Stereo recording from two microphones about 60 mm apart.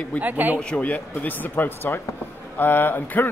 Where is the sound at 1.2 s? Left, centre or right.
Left.